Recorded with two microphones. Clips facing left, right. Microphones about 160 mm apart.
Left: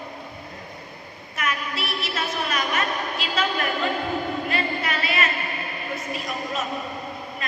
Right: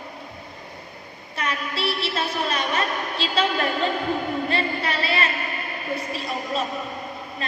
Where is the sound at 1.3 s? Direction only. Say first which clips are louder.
Even; 30° right (ahead or behind).